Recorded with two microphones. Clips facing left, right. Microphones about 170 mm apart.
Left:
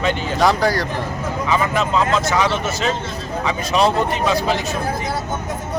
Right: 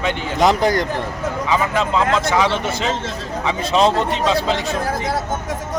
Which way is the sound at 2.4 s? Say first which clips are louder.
Right 1 dB; 15° right (ahead or behind).